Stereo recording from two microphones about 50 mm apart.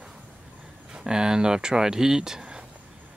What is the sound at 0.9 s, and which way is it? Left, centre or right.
Speech, centre.